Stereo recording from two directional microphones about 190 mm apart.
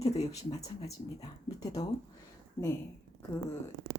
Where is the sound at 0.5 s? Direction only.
20° left (ahead or behind).